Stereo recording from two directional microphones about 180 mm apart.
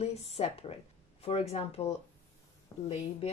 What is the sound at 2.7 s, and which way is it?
Speech, 20° left (ahead or behind).